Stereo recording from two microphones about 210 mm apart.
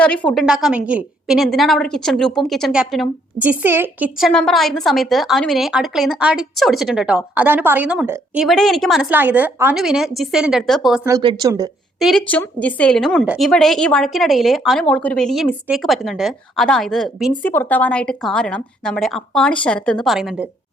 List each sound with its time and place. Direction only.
0.0 s speech: 5° left (ahead or behind)
4.3 s speech: centre (ahead or behind)
11.0 s speech: 20° right (ahead or behind)
11.9 s speech: centre (ahead or behind)